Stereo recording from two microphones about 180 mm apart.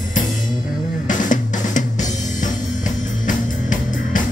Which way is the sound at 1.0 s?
45° left (ahead or behind).